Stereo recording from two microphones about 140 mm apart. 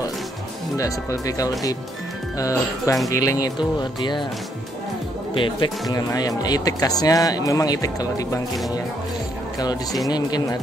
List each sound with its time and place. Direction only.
0.7 s speech: 25° left (ahead or behind)
5.3 s speech: 35° left (ahead or behind)
10.0 s speech: 30° left (ahead or behind)